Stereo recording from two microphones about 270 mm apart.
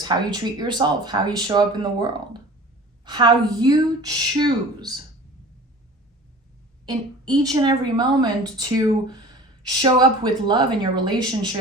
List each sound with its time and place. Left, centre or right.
0.0 s speech: centre
6.8 s speech: centre